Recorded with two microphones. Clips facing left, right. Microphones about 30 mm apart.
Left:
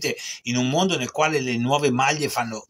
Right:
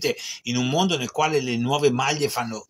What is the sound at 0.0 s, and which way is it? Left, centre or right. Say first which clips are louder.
Speech: right 1 dB; centre.